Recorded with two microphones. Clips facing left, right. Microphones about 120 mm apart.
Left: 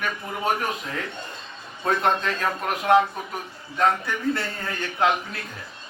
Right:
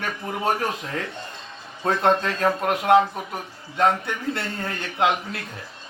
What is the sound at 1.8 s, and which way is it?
Speech, 25° right (ahead or behind).